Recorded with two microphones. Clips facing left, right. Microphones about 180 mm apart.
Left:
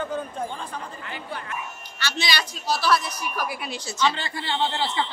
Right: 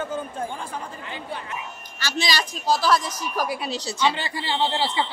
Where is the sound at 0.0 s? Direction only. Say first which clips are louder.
Even; 5° right (ahead or behind).